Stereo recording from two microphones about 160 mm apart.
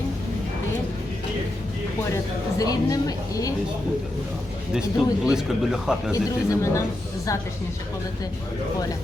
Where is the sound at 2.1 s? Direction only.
20° left (ahead or behind).